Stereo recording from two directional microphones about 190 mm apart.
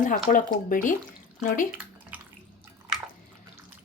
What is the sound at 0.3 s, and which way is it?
Speech, 45° left (ahead or behind).